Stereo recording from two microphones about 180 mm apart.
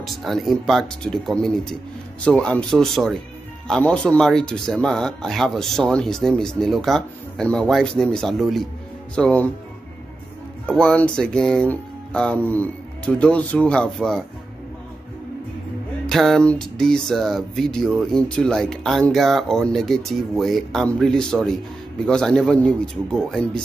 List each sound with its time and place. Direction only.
0.0 s speech: centre (ahead or behind)
10.7 s speech: 5° left (ahead or behind)
16.1 s speech: centre (ahead or behind)